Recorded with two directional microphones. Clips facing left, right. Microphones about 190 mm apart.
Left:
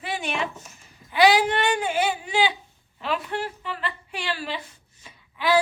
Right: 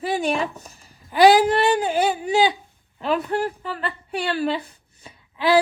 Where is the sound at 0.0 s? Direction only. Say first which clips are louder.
Right 6 dB; 35° right (ahead or behind).